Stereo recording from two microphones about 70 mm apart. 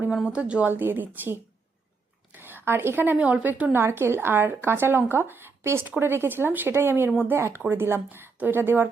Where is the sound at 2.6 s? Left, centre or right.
Right.